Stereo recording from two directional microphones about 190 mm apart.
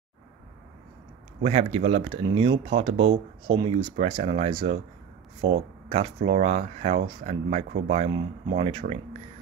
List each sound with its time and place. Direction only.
1.4 s speech: 30° right (ahead or behind)